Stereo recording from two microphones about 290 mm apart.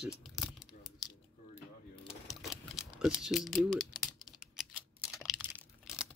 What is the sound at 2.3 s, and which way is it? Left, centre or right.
Typing, centre.